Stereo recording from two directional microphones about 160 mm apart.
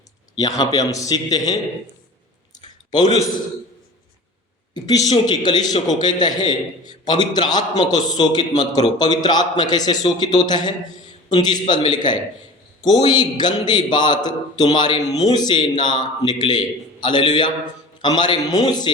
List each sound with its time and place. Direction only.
0.3 s a man's voice: 20° left (ahead or behind)
2.9 s a man's voice: 25° left (ahead or behind)
4.7 s a man's voice: 25° left (ahead or behind)